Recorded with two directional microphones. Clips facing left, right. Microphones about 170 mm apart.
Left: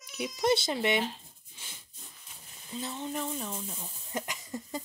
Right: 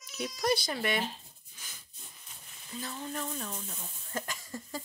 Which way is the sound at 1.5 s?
25° left (ahead or behind).